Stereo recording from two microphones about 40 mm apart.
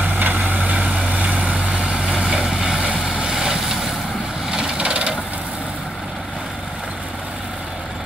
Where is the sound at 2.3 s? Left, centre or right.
Centre.